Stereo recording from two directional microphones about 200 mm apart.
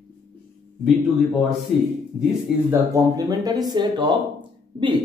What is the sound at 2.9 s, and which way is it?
Speech, 20° right (ahead or behind).